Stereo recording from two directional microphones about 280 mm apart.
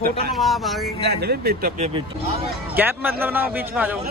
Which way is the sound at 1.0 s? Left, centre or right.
Right.